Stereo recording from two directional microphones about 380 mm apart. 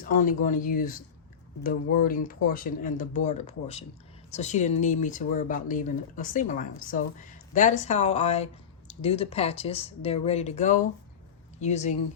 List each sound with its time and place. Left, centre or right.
0.0 s speech: left